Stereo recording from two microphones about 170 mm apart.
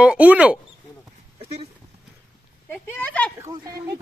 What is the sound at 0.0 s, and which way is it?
Speech, 5° right (ahead or behind).